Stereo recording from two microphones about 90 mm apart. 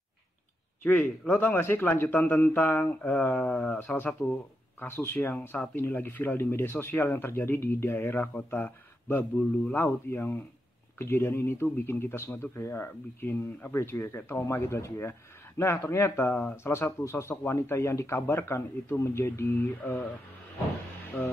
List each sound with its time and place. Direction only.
0.8 s speech: 20° left (ahead or behind)